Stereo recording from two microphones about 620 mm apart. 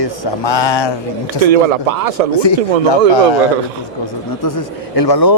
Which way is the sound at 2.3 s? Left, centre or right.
Left.